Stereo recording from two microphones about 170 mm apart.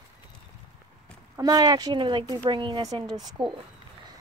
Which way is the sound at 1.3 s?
20° right (ahead or behind).